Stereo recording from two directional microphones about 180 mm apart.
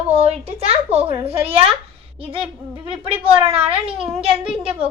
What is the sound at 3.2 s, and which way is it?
Speech, 30° right (ahead or behind).